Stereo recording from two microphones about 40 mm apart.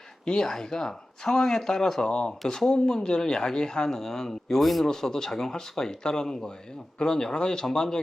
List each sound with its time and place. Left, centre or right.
0.3 s a man's voice: centre